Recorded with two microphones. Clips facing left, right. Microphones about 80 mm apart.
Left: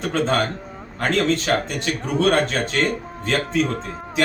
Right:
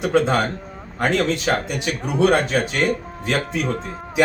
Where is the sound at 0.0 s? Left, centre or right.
Centre.